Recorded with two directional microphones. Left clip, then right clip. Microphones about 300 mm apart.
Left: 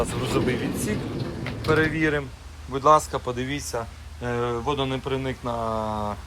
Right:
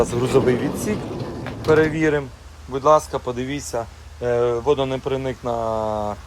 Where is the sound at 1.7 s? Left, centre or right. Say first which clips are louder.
Right 5 dB; centre.